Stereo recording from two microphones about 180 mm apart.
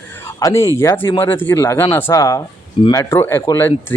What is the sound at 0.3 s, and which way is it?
Speech, 15° left (ahead or behind).